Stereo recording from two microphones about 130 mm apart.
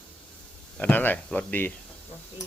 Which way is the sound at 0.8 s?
15° left (ahead or behind).